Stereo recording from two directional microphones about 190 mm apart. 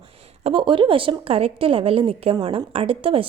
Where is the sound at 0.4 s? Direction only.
25° right (ahead or behind).